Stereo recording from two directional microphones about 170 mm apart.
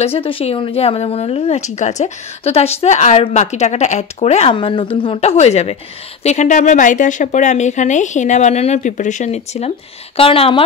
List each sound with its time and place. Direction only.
0.0 s a woman's voice: 35° left (ahead or behind)